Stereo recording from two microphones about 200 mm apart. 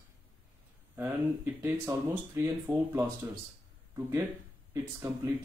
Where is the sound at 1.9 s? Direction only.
15° right (ahead or behind).